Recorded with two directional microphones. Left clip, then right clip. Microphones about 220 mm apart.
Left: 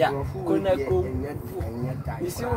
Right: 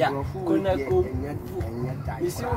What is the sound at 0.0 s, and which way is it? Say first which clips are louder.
Speech: left 1 dB; centre (ahead or behind).